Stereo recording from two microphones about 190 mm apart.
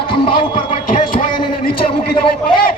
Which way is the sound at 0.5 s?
45° left (ahead or behind).